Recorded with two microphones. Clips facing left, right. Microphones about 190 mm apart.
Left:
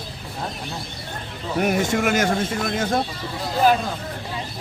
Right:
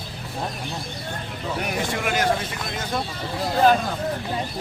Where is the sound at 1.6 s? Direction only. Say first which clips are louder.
Left 8 dB; 45° left (ahead or behind).